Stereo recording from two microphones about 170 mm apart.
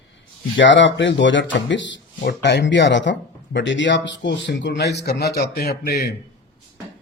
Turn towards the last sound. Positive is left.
turn(degrees=70)  # may be behind; listen again after turning